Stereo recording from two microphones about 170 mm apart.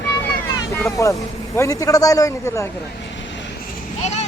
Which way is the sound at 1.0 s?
20° left (ahead or behind).